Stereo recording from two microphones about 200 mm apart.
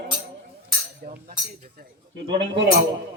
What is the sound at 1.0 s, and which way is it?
Speech, 45° right (ahead or behind).